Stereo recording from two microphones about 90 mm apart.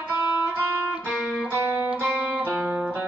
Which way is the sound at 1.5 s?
25° right (ahead or behind).